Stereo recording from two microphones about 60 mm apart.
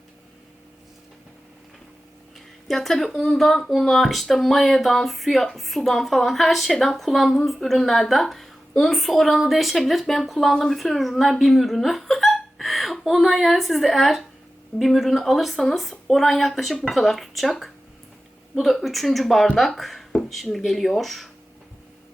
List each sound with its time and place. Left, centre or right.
2.6 s speech: centre